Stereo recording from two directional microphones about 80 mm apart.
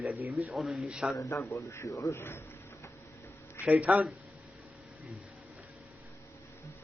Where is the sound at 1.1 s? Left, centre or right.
Left.